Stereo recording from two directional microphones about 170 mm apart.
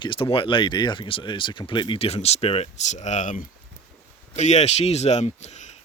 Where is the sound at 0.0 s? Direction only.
30° left (ahead or behind).